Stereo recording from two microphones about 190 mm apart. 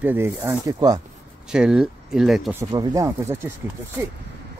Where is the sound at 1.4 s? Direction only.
5° right (ahead or behind).